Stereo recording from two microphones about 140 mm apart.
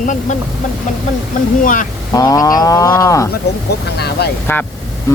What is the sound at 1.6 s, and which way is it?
Speech, 70° left (ahead or behind).